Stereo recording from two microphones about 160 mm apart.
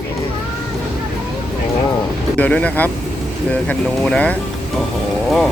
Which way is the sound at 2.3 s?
10° left (ahead or behind).